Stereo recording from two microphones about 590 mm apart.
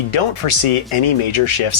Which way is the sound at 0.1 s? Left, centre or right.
Left.